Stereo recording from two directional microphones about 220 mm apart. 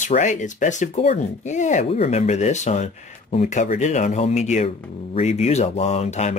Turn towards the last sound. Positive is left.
turn(degrees=30)  # may be behind; listen again after turning